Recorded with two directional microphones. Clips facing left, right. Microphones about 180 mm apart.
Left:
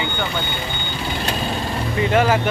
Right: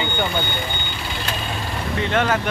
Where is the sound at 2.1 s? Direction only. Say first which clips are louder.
Left 3 dB; 10° left (ahead or behind).